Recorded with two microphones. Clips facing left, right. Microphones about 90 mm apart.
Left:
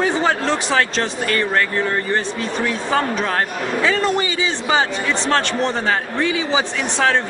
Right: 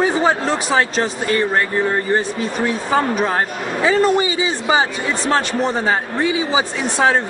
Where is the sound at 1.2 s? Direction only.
20° right (ahead or behind).